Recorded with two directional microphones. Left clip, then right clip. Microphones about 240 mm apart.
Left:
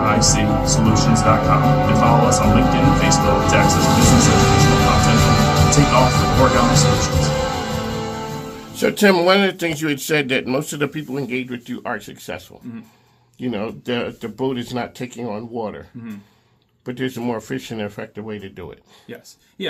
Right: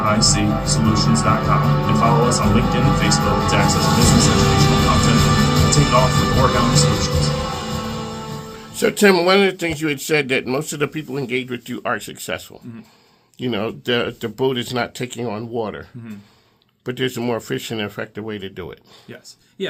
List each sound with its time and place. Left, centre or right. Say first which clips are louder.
0.0 s speech: left 1 dB; right
8.7 s speech: right 1 dB; centre; by 12.4 s right
13.4 s speech: right 3 dB; right
16.8 s speech: right 2 dB; right